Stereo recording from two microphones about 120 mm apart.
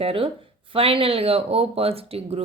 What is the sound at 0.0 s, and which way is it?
Speech, 50° right (ahead or behind).